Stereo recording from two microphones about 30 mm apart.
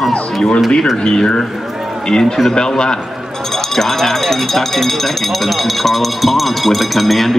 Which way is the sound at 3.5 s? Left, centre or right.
Centre.